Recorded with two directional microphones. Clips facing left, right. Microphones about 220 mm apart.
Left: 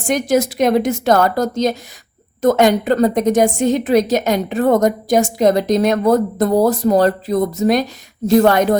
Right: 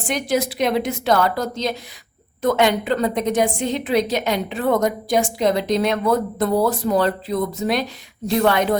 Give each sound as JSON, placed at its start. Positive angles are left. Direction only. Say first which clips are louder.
{"t": 0.1, "sound": "a woman's voice", "louder": "left 6 dB", "side_deg": 45}